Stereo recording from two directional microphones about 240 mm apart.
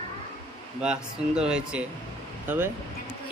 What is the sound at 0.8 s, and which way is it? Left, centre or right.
Speech, centre.